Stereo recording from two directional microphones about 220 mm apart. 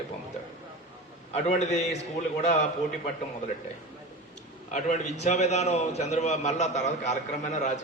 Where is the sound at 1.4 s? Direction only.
30° left (ahead or behind).